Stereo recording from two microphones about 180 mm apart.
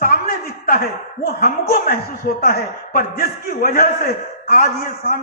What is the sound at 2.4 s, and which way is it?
A man's voice, 55° left (ahead or behind).